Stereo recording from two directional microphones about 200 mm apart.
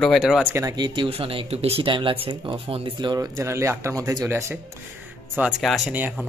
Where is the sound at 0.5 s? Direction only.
20° right (ahead or behind).